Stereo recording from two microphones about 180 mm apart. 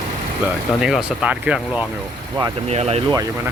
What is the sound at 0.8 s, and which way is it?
Speech, 5° right (ahead or behind).